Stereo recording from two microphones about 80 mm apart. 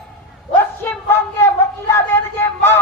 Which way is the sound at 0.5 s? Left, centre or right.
Left.